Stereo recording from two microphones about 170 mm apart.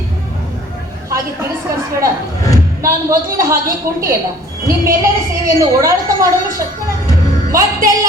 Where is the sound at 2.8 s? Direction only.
20° right (ahead or behind).